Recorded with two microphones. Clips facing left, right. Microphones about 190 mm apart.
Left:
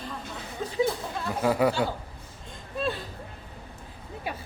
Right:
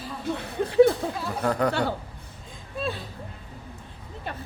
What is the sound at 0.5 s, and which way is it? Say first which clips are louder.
Speech: right 9 dB; 65° right (ahead or behind).